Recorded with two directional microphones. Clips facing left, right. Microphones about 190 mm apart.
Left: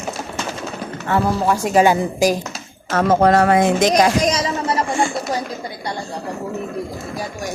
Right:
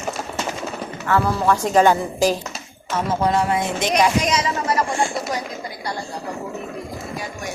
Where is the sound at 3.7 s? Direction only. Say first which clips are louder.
Left 4 dB; 40° left (ahead or behind).